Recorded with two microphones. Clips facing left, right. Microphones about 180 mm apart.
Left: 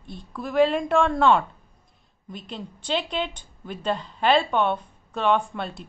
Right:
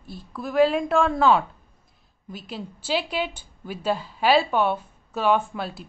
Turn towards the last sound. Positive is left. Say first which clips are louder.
# even
turn(degrees=-5)  # may be behind; listen again after turning